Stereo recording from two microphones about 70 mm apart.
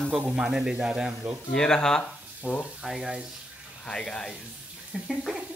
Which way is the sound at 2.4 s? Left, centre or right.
Right.